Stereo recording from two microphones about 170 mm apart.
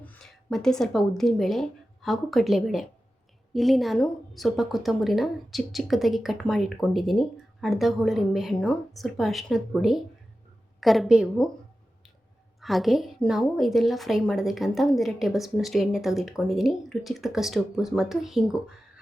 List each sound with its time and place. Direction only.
0.0 s a woman's voice: 5° left (ahead or behind)
12.5 s a woman's voice: centre (ahead or behind)